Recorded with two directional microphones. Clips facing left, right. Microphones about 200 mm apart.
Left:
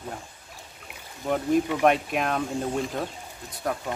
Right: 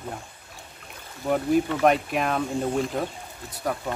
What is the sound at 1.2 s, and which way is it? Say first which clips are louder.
Speech: right 1 dB; 5° right (ahead or behind).